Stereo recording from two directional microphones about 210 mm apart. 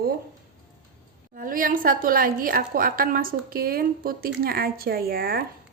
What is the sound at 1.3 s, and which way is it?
A woman's voice, 40° right (ahead or behind).